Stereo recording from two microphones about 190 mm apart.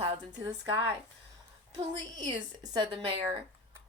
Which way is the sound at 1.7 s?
20° right (ahead or behind).